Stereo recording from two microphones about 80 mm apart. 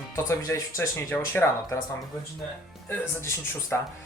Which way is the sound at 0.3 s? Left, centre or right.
Left.